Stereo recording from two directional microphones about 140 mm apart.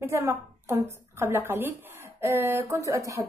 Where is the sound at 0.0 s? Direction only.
20° right (ahead or behind).